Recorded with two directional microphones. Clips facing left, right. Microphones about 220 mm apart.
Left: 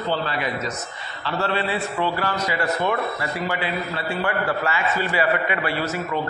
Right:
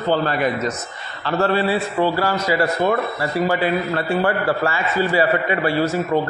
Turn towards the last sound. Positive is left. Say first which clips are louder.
# right 7 dB
turn(degrees=-45)  # may be behind; listen again after turning